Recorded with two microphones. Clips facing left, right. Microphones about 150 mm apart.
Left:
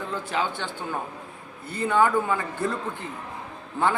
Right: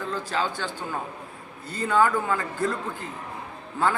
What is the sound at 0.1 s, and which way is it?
Speech, 20° left (ahead or behind).